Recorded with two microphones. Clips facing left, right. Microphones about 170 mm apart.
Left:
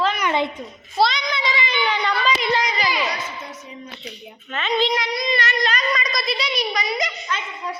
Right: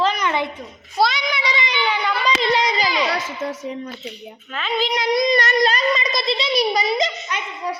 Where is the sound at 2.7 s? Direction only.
25° right (ahead or behind).